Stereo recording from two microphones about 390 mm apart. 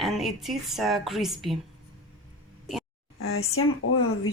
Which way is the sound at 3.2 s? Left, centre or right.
Left.